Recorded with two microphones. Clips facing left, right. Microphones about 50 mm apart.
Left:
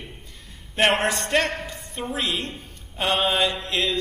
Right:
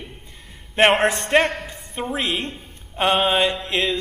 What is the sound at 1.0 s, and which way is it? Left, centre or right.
A man's voice, right.